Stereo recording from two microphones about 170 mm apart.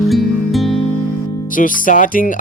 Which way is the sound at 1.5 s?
50° left (ahead or behind).